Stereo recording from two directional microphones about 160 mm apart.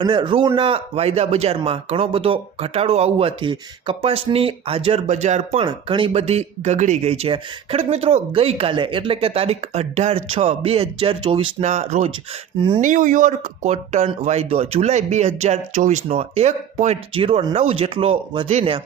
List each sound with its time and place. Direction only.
0.0 s speech: 30° right (ahead or behind)
5.6 s speech: 30° right (ahead or behind)